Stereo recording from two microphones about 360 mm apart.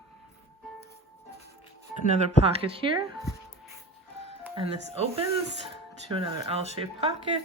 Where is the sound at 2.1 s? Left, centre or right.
Centre.